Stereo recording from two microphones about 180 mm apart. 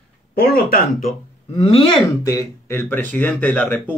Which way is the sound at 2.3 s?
15° left (ahead or behind).